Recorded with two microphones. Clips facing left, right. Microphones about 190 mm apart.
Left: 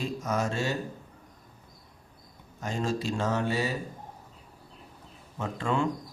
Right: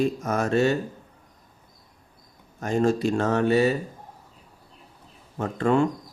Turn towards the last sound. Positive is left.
turn(degrees=-55)  # may be behind; listen again after turning